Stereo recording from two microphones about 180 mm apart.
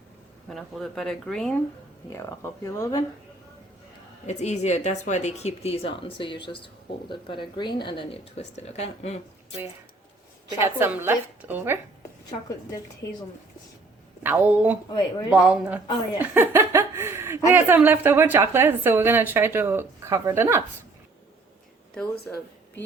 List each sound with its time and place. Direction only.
0.5 s speech: centre (ahead or behind)
2.1 s speech: 15° left (ahead or behind)
4.3 s speech: 40° left (ahead or behind)
10.6 s a woman's voice: 10° right (ahead or behind)
13.0 s speech: 20° left (ahead or behind)
14.3 s a woman's voice: 10° right (ahead or behind)
14.8 s speech: 25° left (ahead or behind)
15.3 s a woman's voice: 5° right (ahead or behind)
16.1 s chuckle: 10° right (ahead or behind)
17.5 s a woman's voice: 10° right (ahead or behind)